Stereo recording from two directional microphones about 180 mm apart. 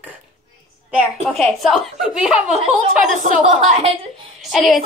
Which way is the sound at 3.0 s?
45° right (ahead or behind).